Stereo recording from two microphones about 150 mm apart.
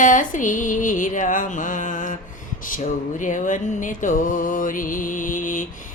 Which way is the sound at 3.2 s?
60° left (ahead or behind).